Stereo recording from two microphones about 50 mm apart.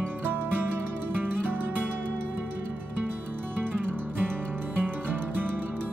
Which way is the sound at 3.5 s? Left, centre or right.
Right.